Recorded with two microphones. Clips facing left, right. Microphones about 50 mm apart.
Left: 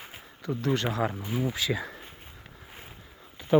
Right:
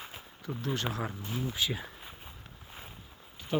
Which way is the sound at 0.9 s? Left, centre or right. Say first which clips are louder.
Left 7 dB; left.